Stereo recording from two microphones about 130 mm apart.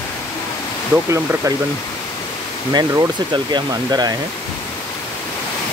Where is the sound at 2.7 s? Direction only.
35° right (ahead or behind).